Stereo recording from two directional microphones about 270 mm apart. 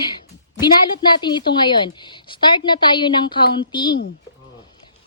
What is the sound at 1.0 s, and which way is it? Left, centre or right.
A woman's voice, centre.